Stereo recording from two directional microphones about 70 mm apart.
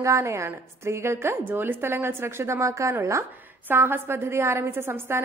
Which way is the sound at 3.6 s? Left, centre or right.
Right.